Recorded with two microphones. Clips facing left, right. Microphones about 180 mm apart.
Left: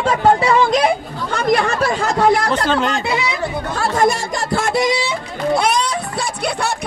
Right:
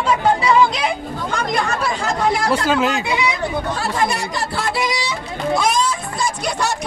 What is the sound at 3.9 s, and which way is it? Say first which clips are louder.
Speech: left 6 dB; 45° left (ahead or behind).